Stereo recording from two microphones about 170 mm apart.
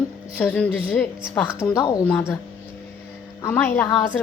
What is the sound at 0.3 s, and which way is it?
Speech, 10° left (ahead or behind).